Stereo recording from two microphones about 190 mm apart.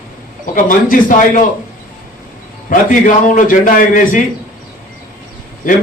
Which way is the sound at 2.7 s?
45° left (ahead or behind).